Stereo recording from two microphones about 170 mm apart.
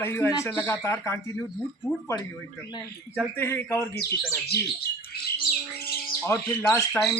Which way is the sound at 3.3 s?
15° left (ahead or behind).